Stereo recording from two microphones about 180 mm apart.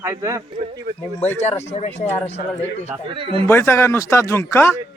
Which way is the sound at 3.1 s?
30° right (ahead or behind).